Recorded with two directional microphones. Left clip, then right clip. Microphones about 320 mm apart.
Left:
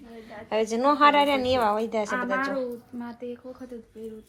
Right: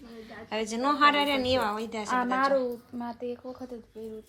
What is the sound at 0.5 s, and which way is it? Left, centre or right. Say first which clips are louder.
A woman's voice: left 5 dB; centre.